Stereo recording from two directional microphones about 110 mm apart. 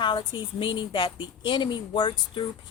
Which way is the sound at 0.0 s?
45° left (ahead or behind).